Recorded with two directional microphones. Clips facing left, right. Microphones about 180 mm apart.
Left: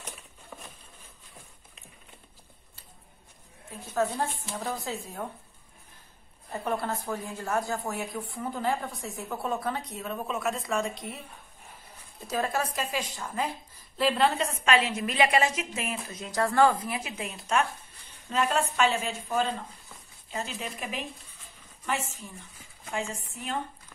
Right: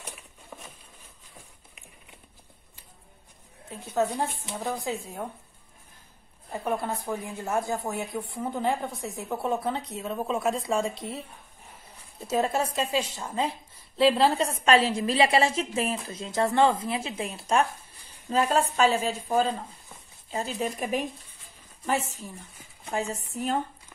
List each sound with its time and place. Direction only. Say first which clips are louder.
0.0 s patter: right 1 dB; 5° right (ahead or behind)
3.9 s a woman's voice: right 2 dB; 15° right (ahead or behind)
6.5 s a woman's voice: right 1 dB; 10° right (ahead or behind); by 11.2 s 30° right (ahead or behind)
12.3 s a woman's voice: right 4 dB; 25° right (ahead or behind); by 23.6 s 40° right (ahead or behind)